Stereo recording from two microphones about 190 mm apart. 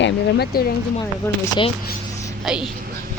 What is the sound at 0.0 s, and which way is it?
Speech, 65° left (ahead or behind).